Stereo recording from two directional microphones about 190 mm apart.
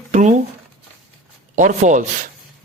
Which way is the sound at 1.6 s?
40° right (ahead or behind).